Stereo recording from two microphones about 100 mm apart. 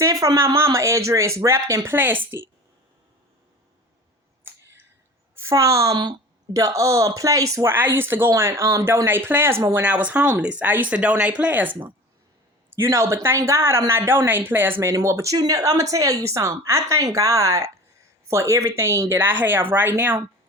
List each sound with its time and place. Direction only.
0.0 s speech: 35° right (ahead or behind)
4.4 s a sound: 25° right (ahead or behind)
5.4 s a woman's voice: 30° right (ahead or behind)
9.8 s speech: 15° right (ahead or behind)
12.7 s speech: 30° right (ahead or behind)
14.8 s speech: 30° right (ahead or behind)